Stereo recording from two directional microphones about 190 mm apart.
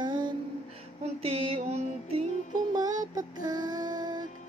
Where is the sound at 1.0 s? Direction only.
30° right (ahead or behind).